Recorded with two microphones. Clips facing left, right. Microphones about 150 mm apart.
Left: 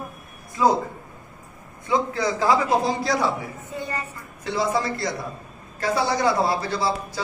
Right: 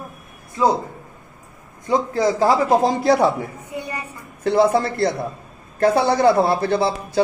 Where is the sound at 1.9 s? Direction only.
40° right (ahead or behind); by 3.3 s 55° right (ahead or behind).